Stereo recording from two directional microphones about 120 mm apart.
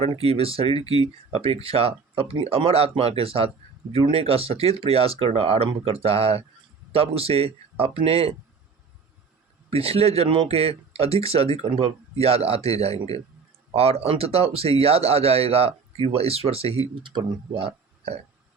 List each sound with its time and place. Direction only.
0.0 s speech: 55° right (ahead or behind)
9.6 s speech: 55° right (ahead or behind)
16.9 s speech: 40° right (ahead or behind)